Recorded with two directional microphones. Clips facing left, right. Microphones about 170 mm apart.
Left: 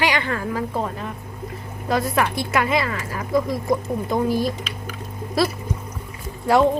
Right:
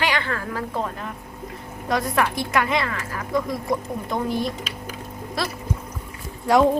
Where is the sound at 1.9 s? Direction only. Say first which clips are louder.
Left 1 dB; 5° left (ahead or behind).